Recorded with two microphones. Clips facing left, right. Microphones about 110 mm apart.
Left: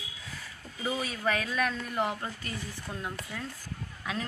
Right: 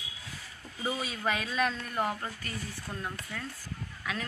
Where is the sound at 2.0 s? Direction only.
15° left (ahead or behind).